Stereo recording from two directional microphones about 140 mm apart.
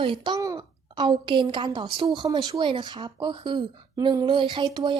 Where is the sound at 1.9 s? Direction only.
35° right (ahead or behind).